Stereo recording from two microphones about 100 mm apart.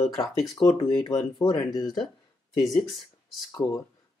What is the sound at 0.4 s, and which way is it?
Speech, 10° left (ahead or behind).